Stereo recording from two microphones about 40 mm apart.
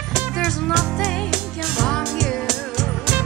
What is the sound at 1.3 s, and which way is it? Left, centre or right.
Music, centre.